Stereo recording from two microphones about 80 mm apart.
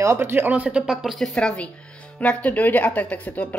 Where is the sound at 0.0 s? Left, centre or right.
Right.